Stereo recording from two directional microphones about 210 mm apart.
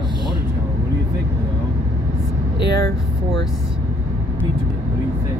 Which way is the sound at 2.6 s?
55° right (ahead or behind).